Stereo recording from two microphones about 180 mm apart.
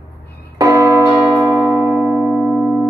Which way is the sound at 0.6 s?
20° right (ahead or behind).